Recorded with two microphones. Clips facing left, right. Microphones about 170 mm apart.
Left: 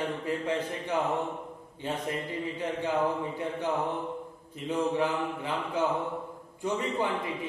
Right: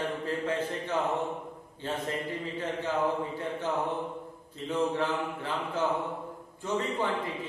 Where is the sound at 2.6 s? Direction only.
15° left (ahead or behind).